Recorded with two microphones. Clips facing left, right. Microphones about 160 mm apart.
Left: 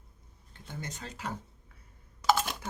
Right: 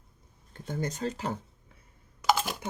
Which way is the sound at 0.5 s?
45° right (ahead or behind).